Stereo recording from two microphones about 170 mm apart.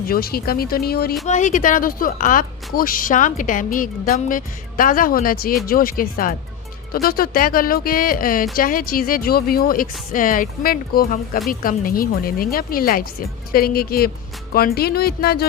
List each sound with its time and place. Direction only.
0.1 s speech: 60° left (ahead or behind)
1.3 s speech: 50° left (ahead or behind); by 15.4 s 65° left (ahead or behind)